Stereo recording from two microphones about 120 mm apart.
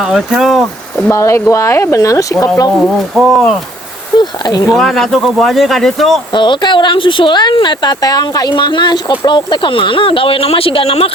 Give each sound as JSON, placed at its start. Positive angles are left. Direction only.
{"t": 0.0, "sound": "speech", "side_deg": -5}
{"t": 1.1, "sound": "speech", "side_deg": 25}
{"t": 2.8, "sound": "speech", "side_deg": -5}
{"t": 4.2, "sound": "speech", "side_deg": 35}
{"t": 4.7, "sound": "speech", "side_deg": 0}
{"t": 6.3, "sound": "speech", "side_deg": 40}